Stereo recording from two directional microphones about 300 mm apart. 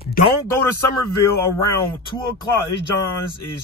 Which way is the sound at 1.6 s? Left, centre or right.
Centre.